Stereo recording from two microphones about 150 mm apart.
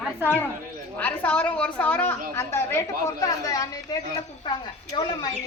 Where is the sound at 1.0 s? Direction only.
10° left (ahead or behind).